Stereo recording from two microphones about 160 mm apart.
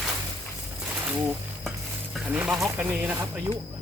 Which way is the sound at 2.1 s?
10° right (ahead or behind).